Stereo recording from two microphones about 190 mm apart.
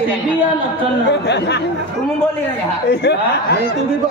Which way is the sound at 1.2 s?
65° left (ahead or behind).